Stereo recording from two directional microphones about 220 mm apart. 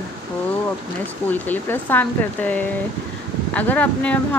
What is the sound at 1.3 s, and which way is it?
Speech, 10° left (ahead or behind).